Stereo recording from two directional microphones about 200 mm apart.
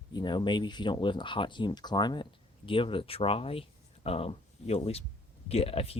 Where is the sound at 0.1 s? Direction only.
20° left (ahead or behind).